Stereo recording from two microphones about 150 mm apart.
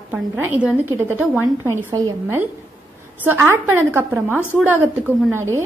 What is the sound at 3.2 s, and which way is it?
A woman's voice, 15° right (ahead or behind).